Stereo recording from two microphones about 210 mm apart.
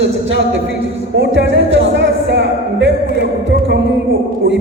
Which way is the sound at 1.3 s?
60° right (ahead or behind).